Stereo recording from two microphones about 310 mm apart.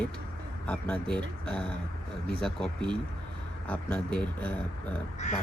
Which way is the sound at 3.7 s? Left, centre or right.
Centre.